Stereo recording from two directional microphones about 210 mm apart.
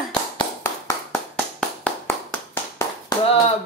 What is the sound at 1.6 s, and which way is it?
Clapping, 5° left (ahead or behind).